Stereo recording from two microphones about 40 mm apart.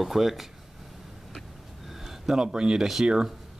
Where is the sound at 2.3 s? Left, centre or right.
Right.